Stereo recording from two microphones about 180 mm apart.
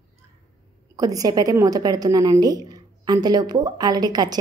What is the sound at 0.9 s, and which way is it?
A woman's voice, 20° right (ahead or behind).